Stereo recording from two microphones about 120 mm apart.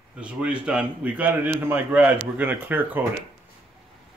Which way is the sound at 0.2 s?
10° right (ahead or behind).